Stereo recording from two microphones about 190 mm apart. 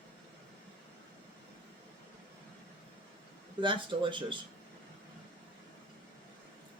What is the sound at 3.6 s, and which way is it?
Speech, 25° right (ahead or behind).